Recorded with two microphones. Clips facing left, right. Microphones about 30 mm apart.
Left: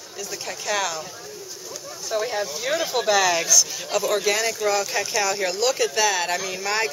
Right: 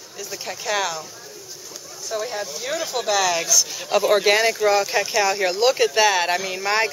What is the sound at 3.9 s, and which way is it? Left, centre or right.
Speech, centre.